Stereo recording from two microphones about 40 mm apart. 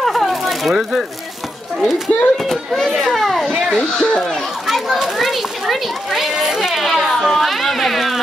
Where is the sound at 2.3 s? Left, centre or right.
Centre.